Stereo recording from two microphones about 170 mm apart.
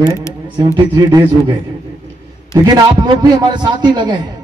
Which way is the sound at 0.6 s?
20° right (ahead or behind).